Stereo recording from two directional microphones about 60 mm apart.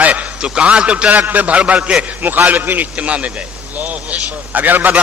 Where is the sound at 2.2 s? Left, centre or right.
Right.